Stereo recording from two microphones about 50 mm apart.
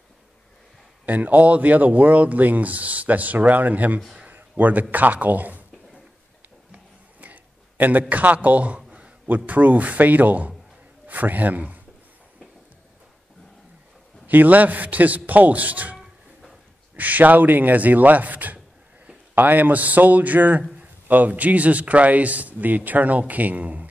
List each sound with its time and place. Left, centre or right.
1.0 s speech: right
4.3 s a sound: right
4.9 s speech: right
6.7 s a sound: right
8.1 s a man's voice: right
9.3 s a man's voice: right
14.2 s speech: right